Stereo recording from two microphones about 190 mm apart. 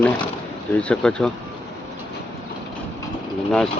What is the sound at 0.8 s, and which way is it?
Speech, 5° left (ahead or behind).